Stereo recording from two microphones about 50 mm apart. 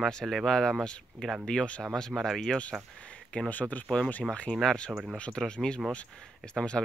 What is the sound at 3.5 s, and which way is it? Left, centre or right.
Speech, left.